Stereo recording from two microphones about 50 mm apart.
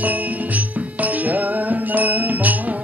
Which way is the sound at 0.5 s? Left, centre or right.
Right.